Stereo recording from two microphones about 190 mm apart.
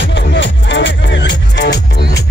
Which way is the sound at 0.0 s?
75° left (ahead or behind).